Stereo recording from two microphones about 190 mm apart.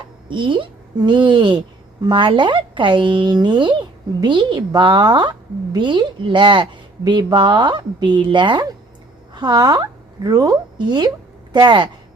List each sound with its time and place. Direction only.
0.3 s a woman's voice: 25° right (ahead or behind)